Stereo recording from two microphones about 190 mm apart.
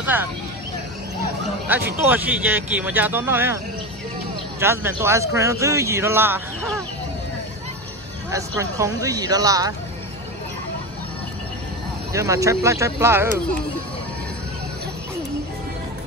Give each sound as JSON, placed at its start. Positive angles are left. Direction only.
{"t": 0.0, "sound": "speech", "side_deg": -10}
{"t": 2.0, "sound": "speech", "side_deg": -10}
{"t": 4.6, "sound": "speech", "side_deg": -15}
{"t": 8.3, "sound": "speech", "side_deg": -15}
{"t": 12.1, "sound": "speech", "side_deg": -15}